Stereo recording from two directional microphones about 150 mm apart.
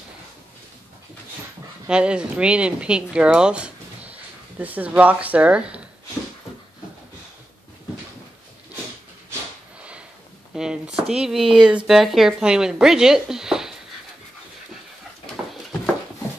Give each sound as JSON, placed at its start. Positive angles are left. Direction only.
{"t": 1.9, "sound": "speech", "side_deg": -5}
{"t": 9.8, "sound": "sniff", "side_deg": -10}
{"t": 10.5, "sound": "a sound", "side_deg": -5}
{"t": 11.1, "sound": "speech", "side_deg": -5}